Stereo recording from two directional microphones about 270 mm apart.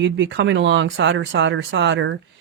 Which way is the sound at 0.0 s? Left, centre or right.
Right.